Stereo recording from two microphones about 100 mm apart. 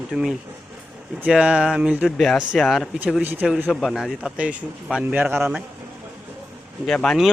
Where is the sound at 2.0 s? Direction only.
5° left (ahead or behind).